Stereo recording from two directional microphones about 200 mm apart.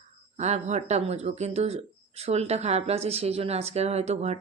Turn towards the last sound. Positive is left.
turn(degrees=-35)  # may be behind; listen again after turning